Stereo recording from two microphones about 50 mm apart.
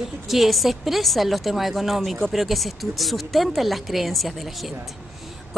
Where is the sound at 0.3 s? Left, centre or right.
Centre.